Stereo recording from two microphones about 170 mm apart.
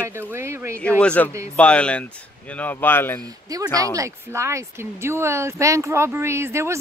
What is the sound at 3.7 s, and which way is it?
Speech, 20° right (ahead or behind).